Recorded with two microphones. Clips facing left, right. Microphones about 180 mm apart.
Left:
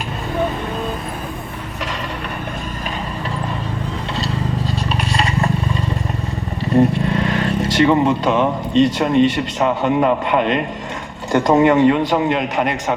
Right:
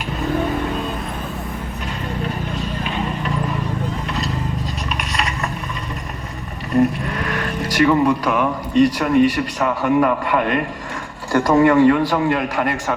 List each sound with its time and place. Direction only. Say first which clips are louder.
4.1 s scrape: left 2 dB; 30° left (ahead or behind)
6.7 s a man's voice: left 2 dB; 25° left (ahead or behind)